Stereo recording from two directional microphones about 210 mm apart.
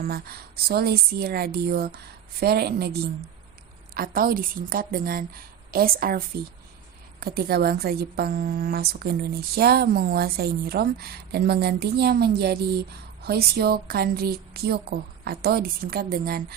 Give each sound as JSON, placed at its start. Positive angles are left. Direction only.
{"t": 0.0, "sound": "a woman's voice", "side_deg": -45}
{"t": 3.9, "sound": "a woman's voice", "side_deg": -45}